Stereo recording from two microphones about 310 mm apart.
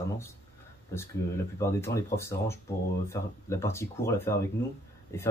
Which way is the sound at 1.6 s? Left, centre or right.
Centre.